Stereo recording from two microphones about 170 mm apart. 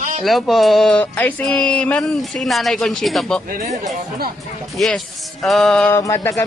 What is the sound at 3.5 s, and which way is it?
Speech, 45° right (ahead or behind).